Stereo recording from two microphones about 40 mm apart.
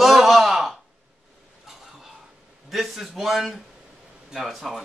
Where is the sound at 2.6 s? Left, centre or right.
Centre.